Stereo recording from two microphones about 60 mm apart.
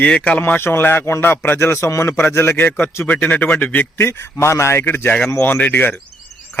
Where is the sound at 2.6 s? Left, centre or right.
Left.